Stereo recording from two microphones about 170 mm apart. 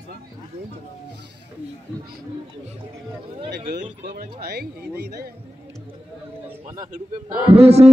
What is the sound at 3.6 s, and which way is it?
Speech, 50° right (ahead or behind).